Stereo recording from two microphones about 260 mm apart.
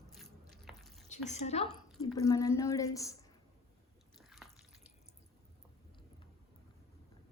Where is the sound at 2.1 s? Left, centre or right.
Centre.